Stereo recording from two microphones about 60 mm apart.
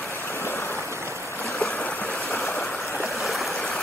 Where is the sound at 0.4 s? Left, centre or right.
Left.